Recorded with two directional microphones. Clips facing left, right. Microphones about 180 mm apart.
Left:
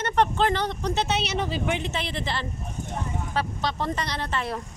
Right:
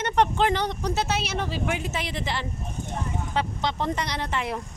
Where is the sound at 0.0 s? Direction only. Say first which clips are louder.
Even; 15° right (ahead or behind).